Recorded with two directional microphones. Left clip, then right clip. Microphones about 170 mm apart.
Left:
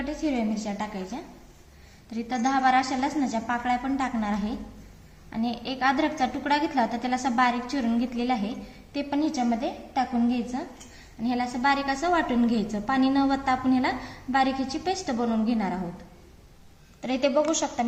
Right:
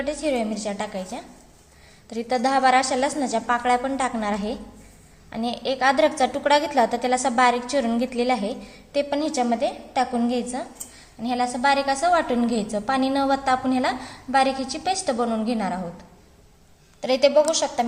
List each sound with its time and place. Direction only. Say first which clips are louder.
0.0 s a woman's voice: right 5 dB; 55° right (ahead or behind)
17.0 s a woman's voice: right 6 dB; 50° right (ahead or behind)